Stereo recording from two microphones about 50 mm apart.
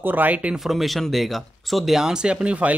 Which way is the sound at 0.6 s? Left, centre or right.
Centre.